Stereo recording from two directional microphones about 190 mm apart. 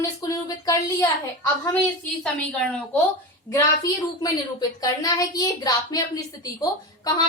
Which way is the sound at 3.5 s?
20° left (ahead or behind).